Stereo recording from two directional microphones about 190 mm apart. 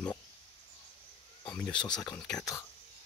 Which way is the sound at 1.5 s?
5° left (ahead or behind).